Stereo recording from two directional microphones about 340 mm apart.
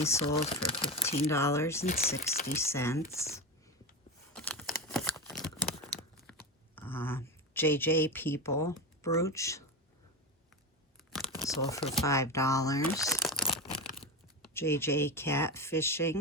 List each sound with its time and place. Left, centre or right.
0.0 s speech: centre
1.8 s speech: left
2.6 s speech: centre
4.4 s a sound: centre
6.7 s speech: centre
11.4 s speech: centre